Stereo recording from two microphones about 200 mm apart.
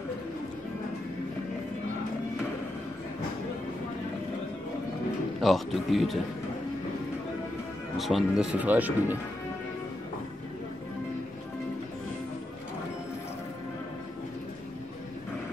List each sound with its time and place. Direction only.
5.4 s a man's voice: centre (ahead or behind)
8.0 s speech: centre (ahead or behind)